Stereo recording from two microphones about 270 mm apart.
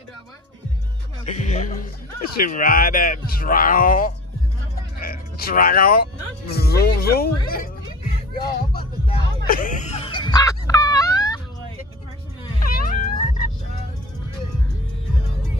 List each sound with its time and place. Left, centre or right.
1.2 s music: left
2.3 s speech: left
9.5 s a sound: left; by 11.4 s centre
12.5 s cat: left
13.0 s music: left